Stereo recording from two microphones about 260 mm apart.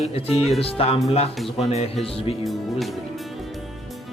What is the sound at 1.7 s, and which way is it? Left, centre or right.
Speech, left.